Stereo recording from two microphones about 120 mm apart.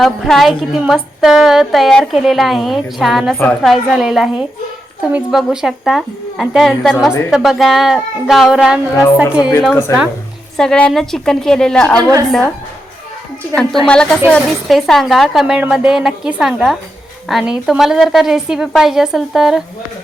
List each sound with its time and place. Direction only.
0.0 s a woman's voice: centre (ahead or behind)
9.9 s speech: 25° left (ahead or behind)
10.6 s a woman's voice: 5° left (ahead or behind)
13.8 s a woman's voice: 5° left (ahead or behind)